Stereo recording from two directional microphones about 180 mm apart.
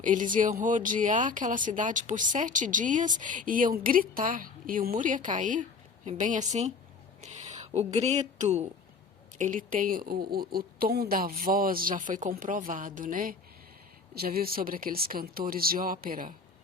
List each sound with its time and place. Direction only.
0.0 s a woman's voice: 45° right (ahead or behind)